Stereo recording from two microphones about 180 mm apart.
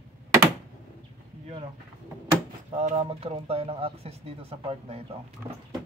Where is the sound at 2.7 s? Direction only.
35° right (ahead or behind).